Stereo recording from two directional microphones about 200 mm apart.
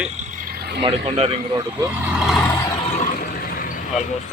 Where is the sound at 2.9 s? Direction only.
45° left (ahead or behind).